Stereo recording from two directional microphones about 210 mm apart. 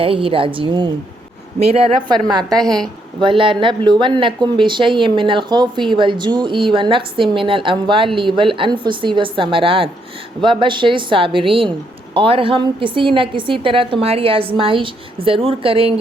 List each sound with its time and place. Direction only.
0.0 s speech: 25° right (ahead or behind)
2.6 s a woman's voice: centre (ahead or behind)
3.2 s speech: 25° right (ahead or behind)